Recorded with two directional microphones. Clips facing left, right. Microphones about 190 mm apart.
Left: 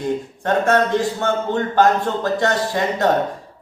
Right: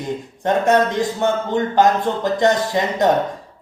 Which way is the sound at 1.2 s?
15° right (ahead or behind).